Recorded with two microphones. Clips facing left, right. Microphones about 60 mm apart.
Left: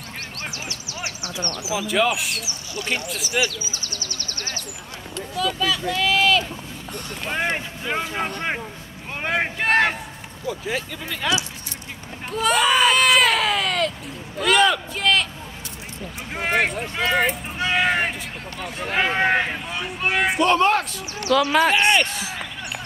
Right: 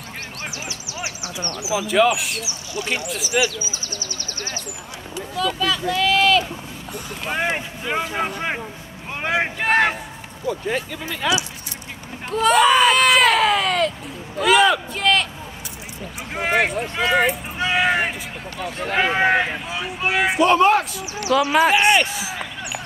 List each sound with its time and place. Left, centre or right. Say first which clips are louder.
0.7 s bird: right 1 dB; centre
1.8 s speech: right 4 dB; centre
5.1 s speech: right 1 dB; centre
12.3 s a man's voice: right 4 dB; centre
16.3 s speech: right 2 dB; centre